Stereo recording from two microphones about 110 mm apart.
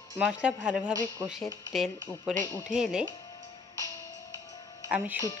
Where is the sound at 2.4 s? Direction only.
25° left (ahead or behind).